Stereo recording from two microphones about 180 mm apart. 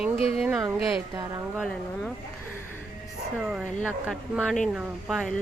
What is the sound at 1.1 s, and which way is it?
Speech, 20° right (ahead or behind).